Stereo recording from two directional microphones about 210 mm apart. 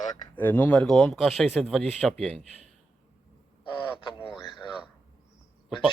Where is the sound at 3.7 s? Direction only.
25° left (ahead or behind).